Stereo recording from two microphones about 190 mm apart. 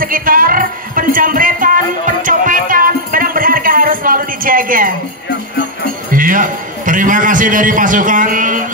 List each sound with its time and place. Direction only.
0.0 s music: 50° right (ahead or behind)
6.1 s a man's voice: 45° right (ahead or behind)